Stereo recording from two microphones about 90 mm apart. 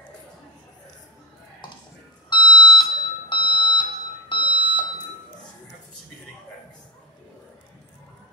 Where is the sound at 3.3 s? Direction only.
65° left (ahead or behind).